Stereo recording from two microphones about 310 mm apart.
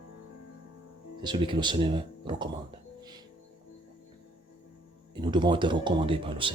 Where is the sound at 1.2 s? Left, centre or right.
Centre.